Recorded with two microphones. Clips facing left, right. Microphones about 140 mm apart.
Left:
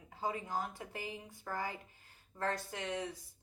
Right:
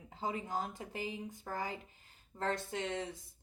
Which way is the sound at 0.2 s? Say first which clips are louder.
Even; 20° right (ahead or behind).